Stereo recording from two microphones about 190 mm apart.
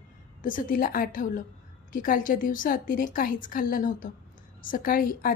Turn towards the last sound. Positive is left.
turn(degrees=50)  # may be behind; listen again after turning